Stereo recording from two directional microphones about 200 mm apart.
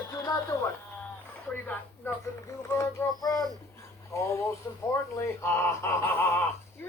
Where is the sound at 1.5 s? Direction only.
10° left (ahead or behind).